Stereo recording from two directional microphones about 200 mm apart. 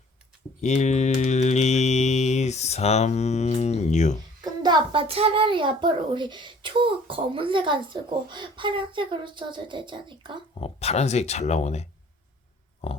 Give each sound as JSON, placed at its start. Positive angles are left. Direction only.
{"t": 0.6, "sound": "mantra", "side_deg": 35}
{"t": 4.4, "sound": "a child's voice", "side_deg": -20}
{"t": 10.6, "sound": "speech", "side_deg": 30}
{"t": 12.8, "sound": "a sound", "side_deg": 30}